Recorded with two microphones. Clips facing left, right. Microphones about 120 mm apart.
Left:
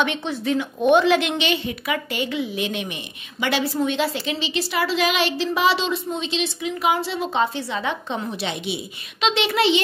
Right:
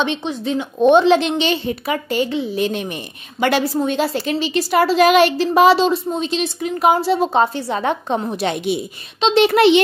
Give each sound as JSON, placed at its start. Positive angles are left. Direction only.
{"t": 0.0, "sound": "a woman's voice", "side_deg": -20}